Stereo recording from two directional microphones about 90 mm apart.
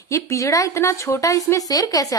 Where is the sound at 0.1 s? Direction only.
35° left (ahead or behind).